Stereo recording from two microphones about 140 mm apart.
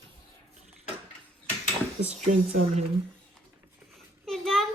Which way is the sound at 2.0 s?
55° right (ahead or behind).